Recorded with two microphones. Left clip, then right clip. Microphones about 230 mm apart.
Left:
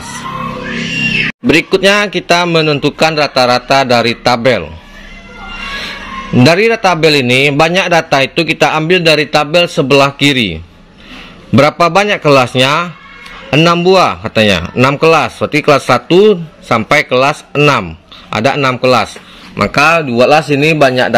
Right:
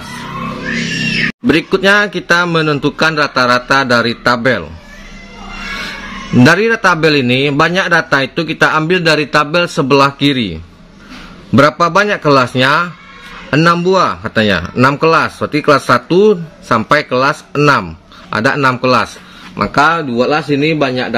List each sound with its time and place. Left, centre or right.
1.5 s a man's voice: centre
5.8 s a man's voice: centre
19.5 s a man's voice: left